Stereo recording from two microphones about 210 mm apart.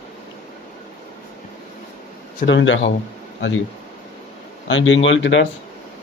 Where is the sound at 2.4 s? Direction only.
60° left (ahead or behind).